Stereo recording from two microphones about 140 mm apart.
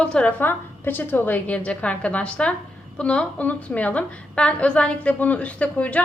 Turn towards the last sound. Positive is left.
turn(degrees=10)  # may be behind; listen again after turning